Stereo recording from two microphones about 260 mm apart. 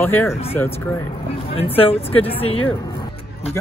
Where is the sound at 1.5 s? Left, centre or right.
Left.